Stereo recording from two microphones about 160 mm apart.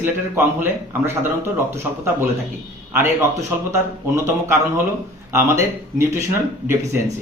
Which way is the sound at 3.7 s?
15° right (ahead or behind).